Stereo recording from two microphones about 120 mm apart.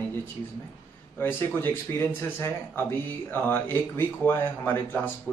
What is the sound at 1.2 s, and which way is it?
Speech, 20° left (ahead or behind).